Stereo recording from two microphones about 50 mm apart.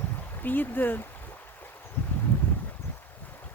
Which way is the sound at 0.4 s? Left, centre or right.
Left.